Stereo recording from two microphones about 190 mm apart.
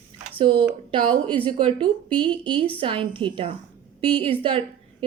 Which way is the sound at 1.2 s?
10° left (ahead or behind).